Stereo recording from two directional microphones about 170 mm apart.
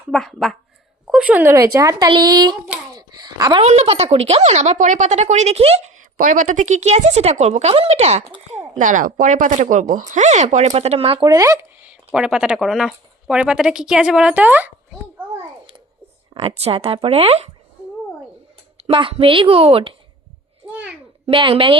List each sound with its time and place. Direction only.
0.1 s speech: centre (ahead or behind); by 2.6 s 25° right (ahead or behind)
2.9 s a sound: 25° right (ahead or behind)
3.6 s speech: 40° right (ahead or behind)
11.3 s speech: 20° right (ahead or behind)
16.3 s speech: 30° right (ahead or behind)
18.8 s speech: 30° right (ahead or behind)
21.2 s speech: 30° right (ahead or behind)